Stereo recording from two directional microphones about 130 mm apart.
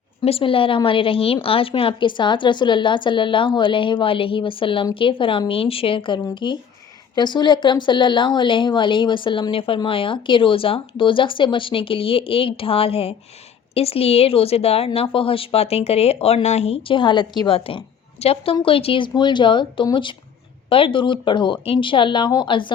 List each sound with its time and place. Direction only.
0.2 s a woman's voice: 45° left (ahead or behind)